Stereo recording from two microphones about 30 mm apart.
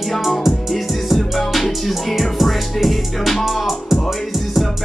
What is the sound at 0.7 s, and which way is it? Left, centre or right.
Music, centre.